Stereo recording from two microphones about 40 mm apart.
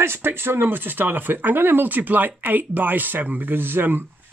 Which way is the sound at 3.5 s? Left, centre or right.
Right.